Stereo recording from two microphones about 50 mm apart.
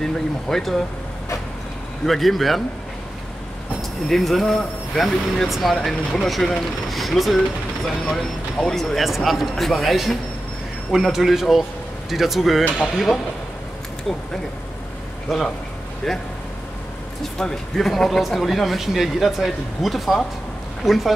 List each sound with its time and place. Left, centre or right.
0.0 s speech: centre
2.0 s speech: centre
4.1 s speech: centre
8.5 s speech: centre
15.2 s a man's voice: centre
17.4 s a man's voice: centre